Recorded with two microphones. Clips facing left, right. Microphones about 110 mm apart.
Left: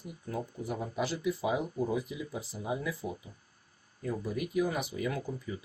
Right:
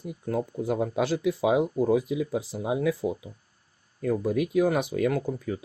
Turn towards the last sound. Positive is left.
turn(degrees=-60)  # may be behind; listen again after turning